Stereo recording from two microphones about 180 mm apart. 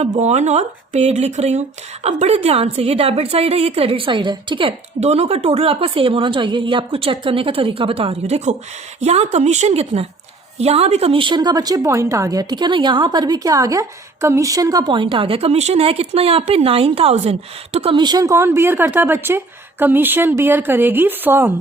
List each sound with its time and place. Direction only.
0.0 s a woman's voice: 40° right (ahead or behind); by 21.5 s 10° right (ahead or behind)